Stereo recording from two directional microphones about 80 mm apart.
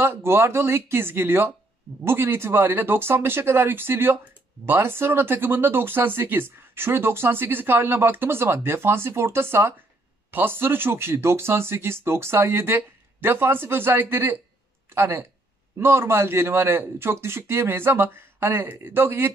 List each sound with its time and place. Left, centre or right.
0.0 s a man's voice: right